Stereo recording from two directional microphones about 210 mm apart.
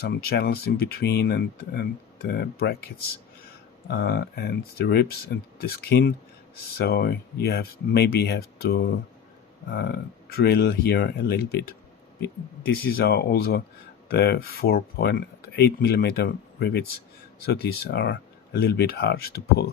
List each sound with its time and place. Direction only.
0.2 s speech: 50° left (ahead or behind)
3.8 s speech: 50° left (ahead or behind)